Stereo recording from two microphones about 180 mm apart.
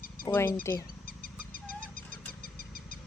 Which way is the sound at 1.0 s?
55° left (ahead or behind).